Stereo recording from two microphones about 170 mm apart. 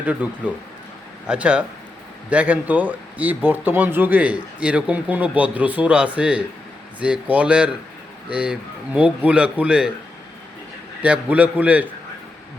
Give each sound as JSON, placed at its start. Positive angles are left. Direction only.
{"t": 0.0, "sound": "speech", "side_deg": -10}
{"t": 11.0, "sound": "speech", "side_deg": -10}